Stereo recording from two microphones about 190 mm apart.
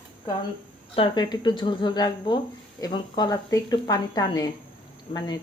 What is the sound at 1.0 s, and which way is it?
Speech, 20° left (ahead or behind).